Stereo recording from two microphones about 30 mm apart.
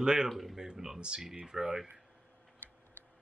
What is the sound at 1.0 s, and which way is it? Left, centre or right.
Speech, right.